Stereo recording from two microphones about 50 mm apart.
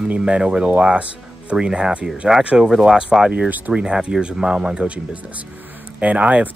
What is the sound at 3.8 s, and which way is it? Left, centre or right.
Speech, centre.